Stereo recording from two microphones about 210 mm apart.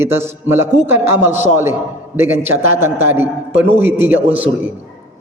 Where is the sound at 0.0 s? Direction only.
10° right (ahead or behind).